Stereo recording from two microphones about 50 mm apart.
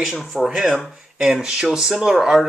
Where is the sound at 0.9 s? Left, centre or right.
Centre.